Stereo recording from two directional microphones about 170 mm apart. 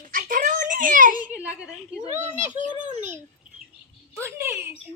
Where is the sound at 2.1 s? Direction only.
45° right (ahead or behind).